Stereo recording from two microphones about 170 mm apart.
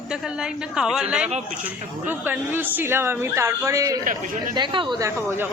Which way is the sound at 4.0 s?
50° right (ahead or behind).